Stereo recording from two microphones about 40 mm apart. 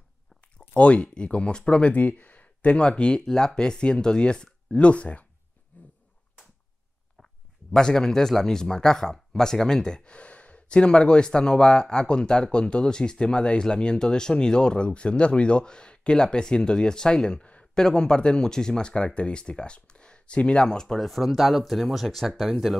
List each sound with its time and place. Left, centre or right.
0.6 s speech: left
2.0 s speech: left
2.8 s speech: left
5.7 s dog: left
7.2 s a sound: centre
7.7 s speech: centre
10.1 s speech: left
20.6 s speech: centre
21.0 s speech: centre